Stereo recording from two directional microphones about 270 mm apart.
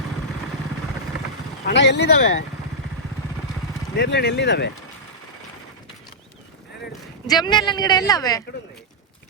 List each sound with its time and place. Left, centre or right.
1.6 s speech: left
3.9 s speech: left
7.3 s speech: centre